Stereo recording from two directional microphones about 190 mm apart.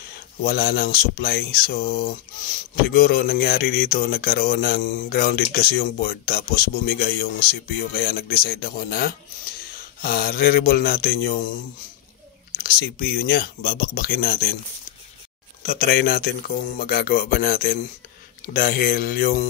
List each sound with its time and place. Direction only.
0.1 s speech: 55° left (ahead or behind)
12.5 s speech: 55° left (ahead or behind)
15.6 s speech: 50° left (ahead or behind)